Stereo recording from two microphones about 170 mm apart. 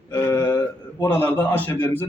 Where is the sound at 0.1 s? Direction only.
15° left (ahead or behind).